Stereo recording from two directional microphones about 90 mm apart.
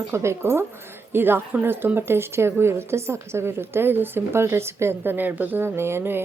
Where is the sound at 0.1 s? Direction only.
30° right (ahead or behind).